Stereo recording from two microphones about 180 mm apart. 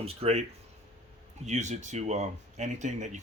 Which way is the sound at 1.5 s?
40° right (ahead or behind).